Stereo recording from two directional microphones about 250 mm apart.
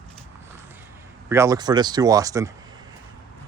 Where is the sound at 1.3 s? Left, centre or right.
Centre.